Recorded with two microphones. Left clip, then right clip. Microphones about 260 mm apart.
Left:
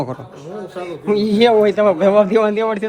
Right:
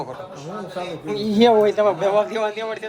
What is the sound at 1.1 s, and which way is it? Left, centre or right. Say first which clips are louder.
A man's voice: left 3 dB; left.